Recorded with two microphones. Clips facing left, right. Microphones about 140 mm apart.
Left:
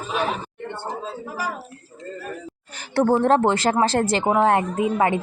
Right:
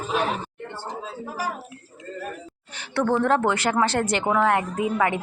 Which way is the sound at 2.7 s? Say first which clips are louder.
Left 4 dB; 40° left (ahead or behind).